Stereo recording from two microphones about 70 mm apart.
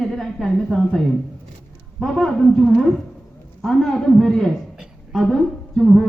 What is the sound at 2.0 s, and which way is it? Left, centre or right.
A man's voice, centre.